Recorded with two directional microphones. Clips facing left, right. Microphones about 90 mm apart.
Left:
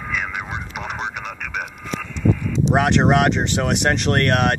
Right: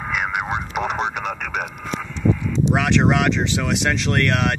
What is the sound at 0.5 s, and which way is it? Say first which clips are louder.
Vehicle: right 5 dB; 60° right (ahead or behind).